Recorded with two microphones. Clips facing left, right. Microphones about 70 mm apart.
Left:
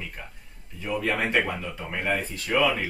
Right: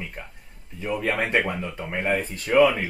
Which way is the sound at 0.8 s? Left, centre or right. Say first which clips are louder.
Right 1 dB; centre.